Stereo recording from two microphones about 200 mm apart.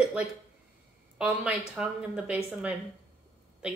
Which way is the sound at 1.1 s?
5° right (ahead or behind).